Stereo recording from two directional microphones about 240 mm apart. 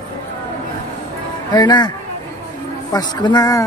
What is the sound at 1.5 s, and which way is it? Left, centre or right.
Speech, centre.